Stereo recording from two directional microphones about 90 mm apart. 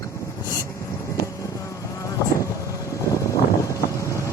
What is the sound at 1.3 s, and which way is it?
Vehicle, 35° left (ahead or behind).